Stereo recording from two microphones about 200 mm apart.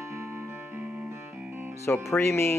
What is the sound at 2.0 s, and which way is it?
Speech, 10° left (ahead or behind).